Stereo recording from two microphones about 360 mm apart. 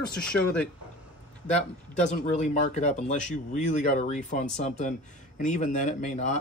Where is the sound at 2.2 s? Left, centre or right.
Centre.